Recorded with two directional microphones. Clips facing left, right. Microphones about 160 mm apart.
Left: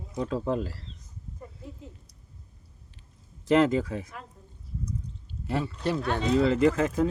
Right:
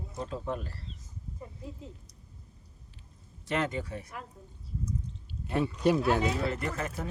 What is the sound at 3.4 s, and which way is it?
Speech, 90° left.